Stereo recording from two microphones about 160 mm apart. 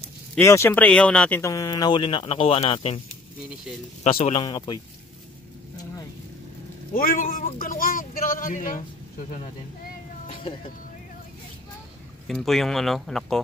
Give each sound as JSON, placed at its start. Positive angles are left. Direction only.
{"t": 0.4, "sound": "speech", "side_deg": 15}
{"t": 1.4, "sound": "speech", "side_deg": 20}
{"t": 4.0, "sound": "speech", "side_deg": 40}
{"t": 4.4, "sound": "speech", "side_deg": 25}
{"t": 6.9, "sound": "a man's voice", "side_deg": 60}
{"t": 10.2, "sound": "cat", "side_deg": 35}
{"t": 12.3, "sound": "speech", "side_deg": 0}